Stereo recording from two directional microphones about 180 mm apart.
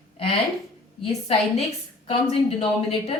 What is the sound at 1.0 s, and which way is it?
Speech, 35° left (ahead or behind).